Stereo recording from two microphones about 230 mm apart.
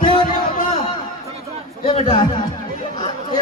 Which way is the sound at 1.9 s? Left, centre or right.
Left.